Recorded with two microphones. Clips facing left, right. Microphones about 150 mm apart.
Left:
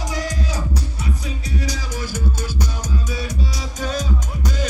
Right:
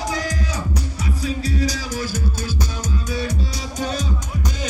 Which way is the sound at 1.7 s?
20° left (ahead or behind).